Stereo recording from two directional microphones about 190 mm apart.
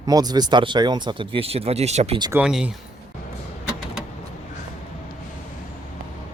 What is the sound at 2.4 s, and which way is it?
Speech, 5° right (ahead or behind).